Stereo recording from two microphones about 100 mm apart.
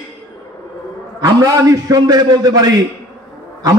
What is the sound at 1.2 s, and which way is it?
A man's voice, 35° right (ahead or behind).